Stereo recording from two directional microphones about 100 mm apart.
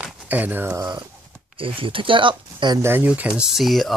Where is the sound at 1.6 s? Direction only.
60° right (ahead or behind).